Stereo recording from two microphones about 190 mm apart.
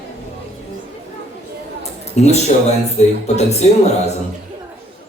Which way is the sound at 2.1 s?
35° left (ahead or behind).